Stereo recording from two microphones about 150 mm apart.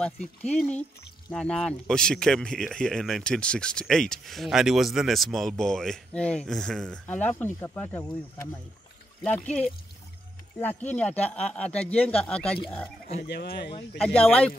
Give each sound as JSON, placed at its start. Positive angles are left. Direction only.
{"t": 0.0, "sound": "speech", "side_deg": 5}
{"t": 10.8, "sound": "speech", "side_deg": 10}
{"t": 13.2, "sound": "speech", "side_deg": 90}
{"t": 13.9, "sound": "speech", "side_deg": 10}